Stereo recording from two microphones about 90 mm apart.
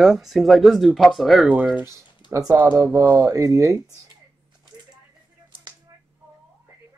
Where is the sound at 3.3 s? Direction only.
35° right (ahead or behind).